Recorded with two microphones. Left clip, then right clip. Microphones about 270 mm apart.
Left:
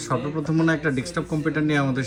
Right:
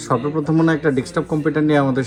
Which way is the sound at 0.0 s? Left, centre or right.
Centre.